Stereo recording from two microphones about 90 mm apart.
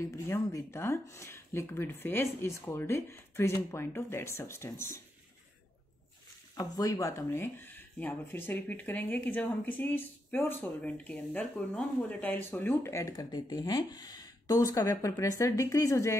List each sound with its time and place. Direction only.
0.0 s speech: 35° left (ahead or behind)
6.5 s speech: 40° left (ahead or behind); by 12.9 s 25° left (ahead or behind)
12.9 s speech: 40° left (ahead or behind)